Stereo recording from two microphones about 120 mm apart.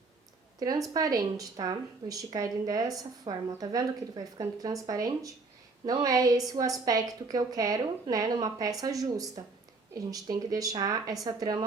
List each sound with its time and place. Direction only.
0.6 s speech: 30° right (ahead or behind)